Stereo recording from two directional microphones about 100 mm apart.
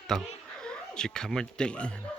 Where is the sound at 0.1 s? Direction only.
5° left (ahead or behind).